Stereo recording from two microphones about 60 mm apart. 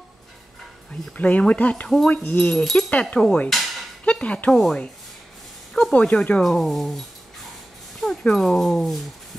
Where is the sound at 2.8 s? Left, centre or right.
Left.